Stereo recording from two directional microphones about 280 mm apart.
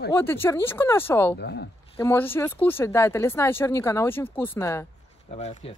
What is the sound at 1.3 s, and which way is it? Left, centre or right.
Speech, left.